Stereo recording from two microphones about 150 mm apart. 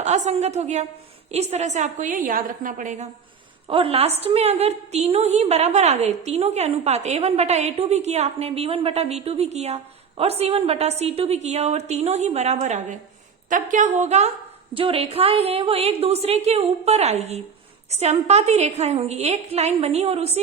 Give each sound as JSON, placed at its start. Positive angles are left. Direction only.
{"t": 0.0, "sound": "a woman's voice", "side_deg": -50}
{"t": 3.7, "sound": "a woman's voice", "side_deg": -40}